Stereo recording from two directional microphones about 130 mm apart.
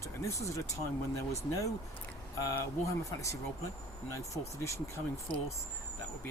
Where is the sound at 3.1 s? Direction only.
25° left (ahead or behind).